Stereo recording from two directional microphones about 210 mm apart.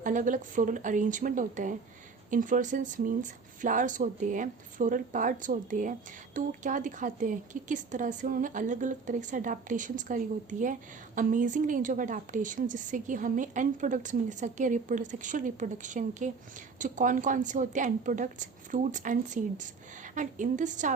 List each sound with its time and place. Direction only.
0.0 s speech: 40° right (ahead or behind)